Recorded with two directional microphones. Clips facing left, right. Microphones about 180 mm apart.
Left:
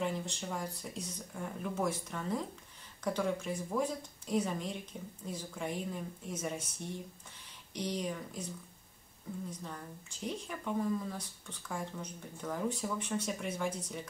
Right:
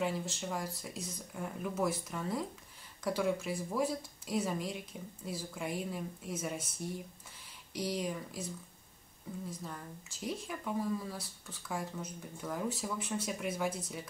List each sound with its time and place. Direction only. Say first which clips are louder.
0.0 s speech: right 1 dB; 5° right (ahead or behind)
9.5 s speech: even; 5° right (ahead or behind)